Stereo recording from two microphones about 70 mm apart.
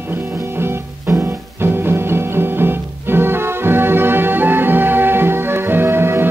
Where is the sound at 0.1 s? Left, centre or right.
Right.